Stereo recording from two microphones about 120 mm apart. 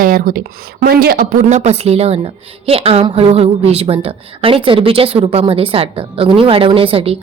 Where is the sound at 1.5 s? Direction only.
70° right (ahead or behind).